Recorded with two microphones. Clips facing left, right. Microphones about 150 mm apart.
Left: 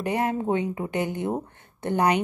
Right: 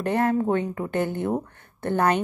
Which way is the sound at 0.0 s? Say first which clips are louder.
Right 3 dB; 15° left (ahead or behind).